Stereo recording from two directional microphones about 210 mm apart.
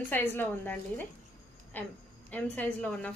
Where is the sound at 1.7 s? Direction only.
10° left (ahead or behind).